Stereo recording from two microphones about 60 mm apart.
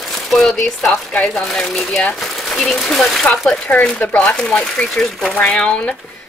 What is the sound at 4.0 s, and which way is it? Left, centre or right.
Speech, centre.